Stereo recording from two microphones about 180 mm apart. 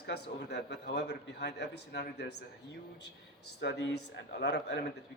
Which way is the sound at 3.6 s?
75° left (ahead or behind).